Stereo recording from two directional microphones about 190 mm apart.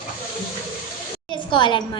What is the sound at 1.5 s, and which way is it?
Speech, 25° left (ahead or behind).